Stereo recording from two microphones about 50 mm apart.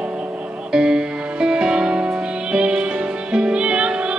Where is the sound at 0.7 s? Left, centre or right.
Centre.